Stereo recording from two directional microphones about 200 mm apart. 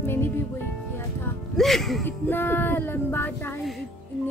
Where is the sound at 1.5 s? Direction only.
Centre (ahead or behind).